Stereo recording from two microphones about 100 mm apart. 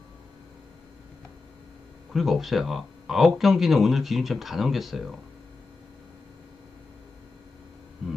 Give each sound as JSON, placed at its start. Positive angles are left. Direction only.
{"t": 2.1, "sound": "speech", "side_deg": 0}